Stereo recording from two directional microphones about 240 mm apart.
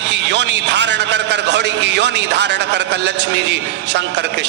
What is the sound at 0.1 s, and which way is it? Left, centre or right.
A man's voice, right.